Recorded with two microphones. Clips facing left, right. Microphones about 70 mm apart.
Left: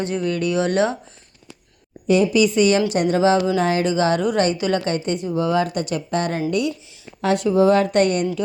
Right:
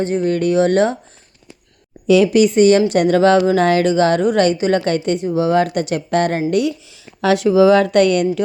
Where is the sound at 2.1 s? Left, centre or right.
Right.